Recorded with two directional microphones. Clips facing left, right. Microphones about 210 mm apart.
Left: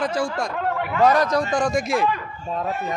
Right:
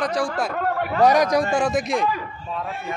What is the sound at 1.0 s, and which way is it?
A man's voice, 15° right (ahead or behind).